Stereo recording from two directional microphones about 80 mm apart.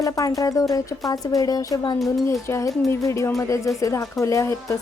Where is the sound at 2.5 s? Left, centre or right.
Left.